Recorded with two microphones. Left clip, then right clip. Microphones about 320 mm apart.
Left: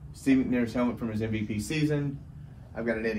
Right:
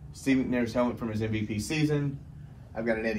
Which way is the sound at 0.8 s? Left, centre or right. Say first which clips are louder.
Even; centre.